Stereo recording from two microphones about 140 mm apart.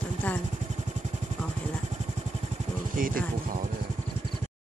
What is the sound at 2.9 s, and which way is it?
Speech, 80° right.